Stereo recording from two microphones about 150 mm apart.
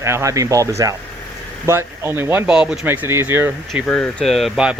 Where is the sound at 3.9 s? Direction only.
5° left (ahead or behind).